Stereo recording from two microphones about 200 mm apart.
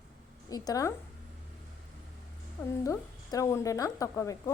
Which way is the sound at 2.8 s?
15° left (ahead or behind).